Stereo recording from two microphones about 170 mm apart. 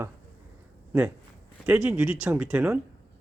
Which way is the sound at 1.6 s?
10° right (ahead or behind).